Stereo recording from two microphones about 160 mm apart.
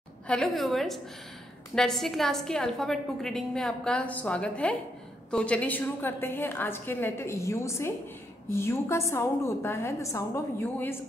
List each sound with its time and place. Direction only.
0.3 s a woman's voice: centre (ahead or behind)